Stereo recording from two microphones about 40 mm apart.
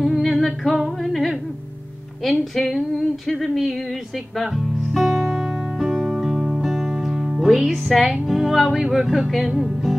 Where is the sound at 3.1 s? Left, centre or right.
Centre.